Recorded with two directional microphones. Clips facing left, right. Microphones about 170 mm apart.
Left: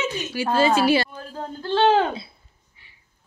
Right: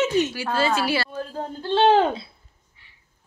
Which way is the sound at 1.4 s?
20° right (ahead or behind).